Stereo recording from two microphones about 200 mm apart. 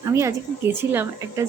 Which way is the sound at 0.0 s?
15° right (ahead or behind).